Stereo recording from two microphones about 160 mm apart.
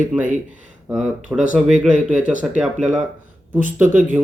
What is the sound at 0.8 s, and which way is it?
Speech, 5° right (ahead or behind).